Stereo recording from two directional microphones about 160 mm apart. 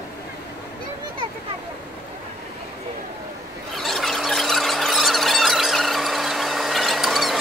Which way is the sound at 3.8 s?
Centre (ahead or behind).